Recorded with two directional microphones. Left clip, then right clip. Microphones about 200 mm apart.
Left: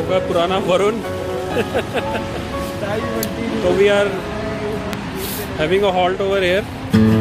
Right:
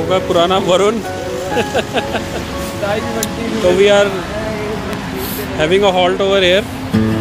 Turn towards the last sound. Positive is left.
turn(degrees=0)  # may be behind; listen again after turning